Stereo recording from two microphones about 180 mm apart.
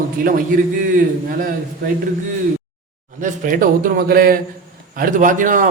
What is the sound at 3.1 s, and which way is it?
A man's voice, 45° right (ahead or behind).